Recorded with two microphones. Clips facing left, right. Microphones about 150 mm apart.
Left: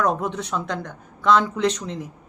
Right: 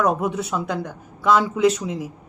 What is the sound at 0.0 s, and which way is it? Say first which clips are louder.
Speech: right 2 dB; 10° right (ahead or behind).